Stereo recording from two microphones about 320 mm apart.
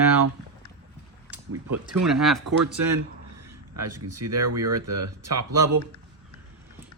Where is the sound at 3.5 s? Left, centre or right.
Right.